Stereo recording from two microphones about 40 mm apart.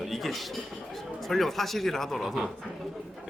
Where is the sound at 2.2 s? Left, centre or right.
Centre.